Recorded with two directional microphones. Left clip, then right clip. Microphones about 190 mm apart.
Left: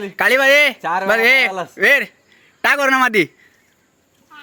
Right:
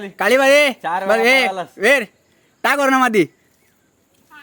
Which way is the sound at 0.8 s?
55° left (ahead or behind).